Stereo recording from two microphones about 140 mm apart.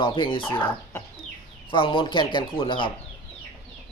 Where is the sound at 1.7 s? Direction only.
40° left (ahead or behind).